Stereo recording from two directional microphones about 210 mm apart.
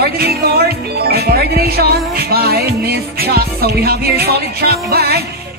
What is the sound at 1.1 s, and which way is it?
Music, 45° right (ahead or behind).